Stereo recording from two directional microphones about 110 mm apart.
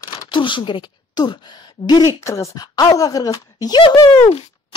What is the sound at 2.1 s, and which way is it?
Speech, 25° left (ahead or behind).